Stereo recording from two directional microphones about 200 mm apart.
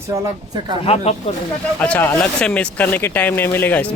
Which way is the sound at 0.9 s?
30° left (ahead or behind).